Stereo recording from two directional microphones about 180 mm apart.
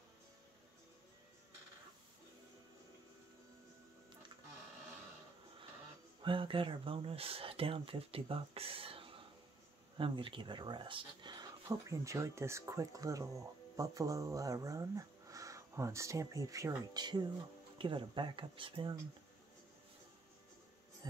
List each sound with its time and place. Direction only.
6.2 s speech: 30° right (ahead or behind)